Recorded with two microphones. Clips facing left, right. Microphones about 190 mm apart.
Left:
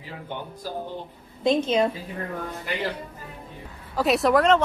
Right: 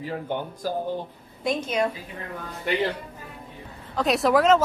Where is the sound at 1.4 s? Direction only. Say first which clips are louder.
Left 4 dB; 25° left (ahead or behind).